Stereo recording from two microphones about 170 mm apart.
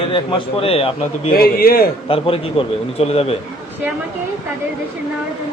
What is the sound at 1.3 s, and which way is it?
Speech, 60° left (ahead or behind).